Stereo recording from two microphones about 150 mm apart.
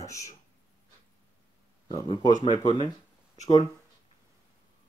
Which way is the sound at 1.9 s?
30° left (ahead or behind).